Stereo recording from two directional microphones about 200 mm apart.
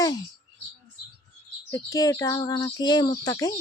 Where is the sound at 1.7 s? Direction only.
15° left (ahead or behind).